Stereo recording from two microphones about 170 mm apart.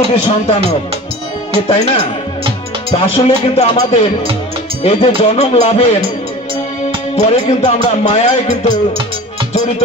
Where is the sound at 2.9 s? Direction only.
35° left (ahead or behind).